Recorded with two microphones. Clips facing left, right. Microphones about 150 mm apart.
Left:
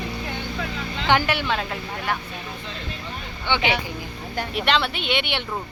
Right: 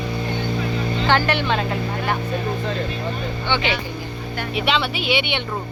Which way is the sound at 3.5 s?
15° left (ahead or behind).